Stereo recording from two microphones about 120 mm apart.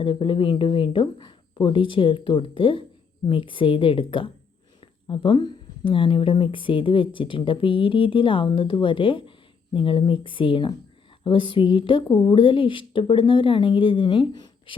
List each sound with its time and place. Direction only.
0.0 s speech: 45° left (ahead or behind)